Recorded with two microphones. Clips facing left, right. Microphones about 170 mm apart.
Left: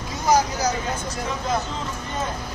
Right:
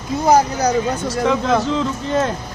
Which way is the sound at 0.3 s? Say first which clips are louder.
Right 5 dB; 70° right (ahead or behind).